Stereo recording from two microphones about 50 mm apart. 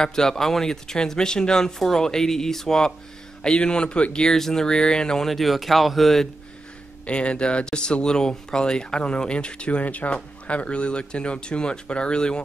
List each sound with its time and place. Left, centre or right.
0.0 s speech: centre
7.1 s speech: left